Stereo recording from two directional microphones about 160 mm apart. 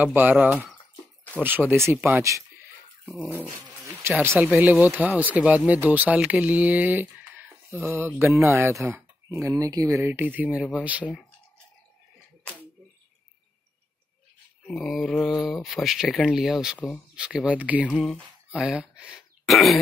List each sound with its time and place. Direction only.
0.0 s speech: 10° right (ahead or behind)
3.4 s dog: 15° right (ahead or behind)
4.2 s speech: 15° right (ahead or behind)
14.7 s speech: centre (ahead or behind)
16.7 s speech: 10° left (ahead or behind)
17.1 s speech: 5° right (ahead or behind)
17.8 s speech: 5° left (ahead or behind)